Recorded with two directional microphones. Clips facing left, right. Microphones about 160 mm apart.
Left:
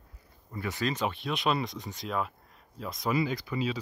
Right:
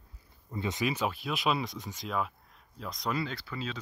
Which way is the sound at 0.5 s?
20° right (ahead or behind).